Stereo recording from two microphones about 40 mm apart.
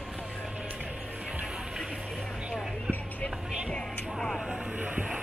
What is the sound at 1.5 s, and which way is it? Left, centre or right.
Music, centre.